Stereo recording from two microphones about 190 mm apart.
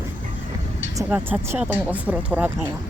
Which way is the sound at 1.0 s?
10° right (ahead or behind).